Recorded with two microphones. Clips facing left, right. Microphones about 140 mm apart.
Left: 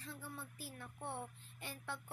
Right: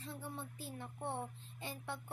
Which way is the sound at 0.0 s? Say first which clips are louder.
Right 4 dB; 25° right (ahead or behind).